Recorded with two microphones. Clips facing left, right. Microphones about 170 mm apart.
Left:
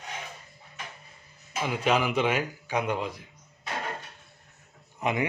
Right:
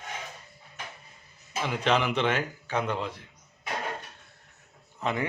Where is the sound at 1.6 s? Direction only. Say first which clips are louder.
Even; 10° left (ahead or behind).